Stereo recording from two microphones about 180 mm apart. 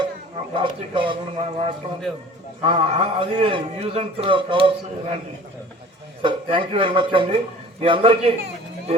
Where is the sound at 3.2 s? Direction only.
30° right (ahead or behind).